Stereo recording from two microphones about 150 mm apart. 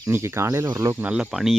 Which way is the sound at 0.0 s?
20° right (ahead or behind).